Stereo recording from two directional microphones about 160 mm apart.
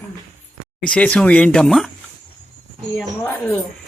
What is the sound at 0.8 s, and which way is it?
A woman's voice, 5° left (ahead or behind).